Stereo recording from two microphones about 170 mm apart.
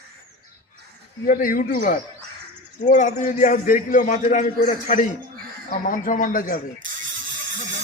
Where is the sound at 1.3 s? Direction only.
55° left (ahead or behind).